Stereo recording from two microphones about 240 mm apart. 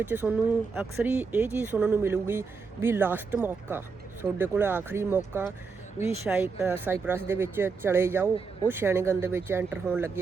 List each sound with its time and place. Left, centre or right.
0.0 s speech: centre